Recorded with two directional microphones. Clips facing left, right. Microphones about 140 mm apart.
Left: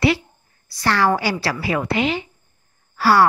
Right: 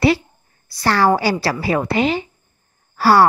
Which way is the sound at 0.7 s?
35° right (ahead or behind).